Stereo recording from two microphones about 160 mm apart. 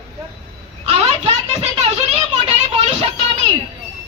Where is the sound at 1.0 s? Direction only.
40° right (ahead or behind).